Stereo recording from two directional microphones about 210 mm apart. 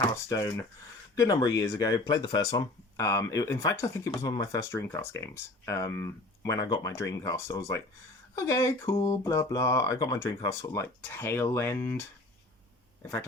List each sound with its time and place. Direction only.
0.3 s speech: 10° left (ahead or behind)